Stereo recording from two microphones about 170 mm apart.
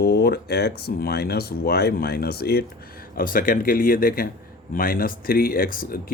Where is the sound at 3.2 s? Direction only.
55° left (ahead or behind).